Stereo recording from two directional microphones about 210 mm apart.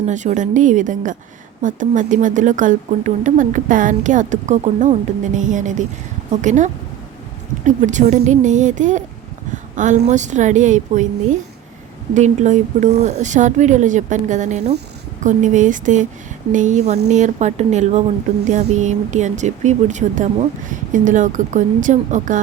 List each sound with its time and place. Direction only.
0.0 s speech: 35° right (ahead or behind)